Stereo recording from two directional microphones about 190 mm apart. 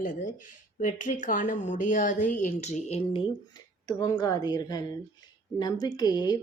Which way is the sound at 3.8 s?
20° left (ahead or behind).